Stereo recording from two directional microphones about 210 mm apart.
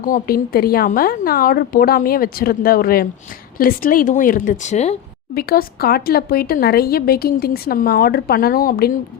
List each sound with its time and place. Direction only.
0.0 s a woman's voice: 45° left (ahead or behind)
5.3 s speech: 45° left (ahead or behind)